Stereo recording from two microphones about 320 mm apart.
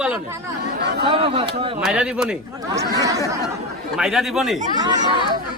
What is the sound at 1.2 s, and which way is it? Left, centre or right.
Speech, centre.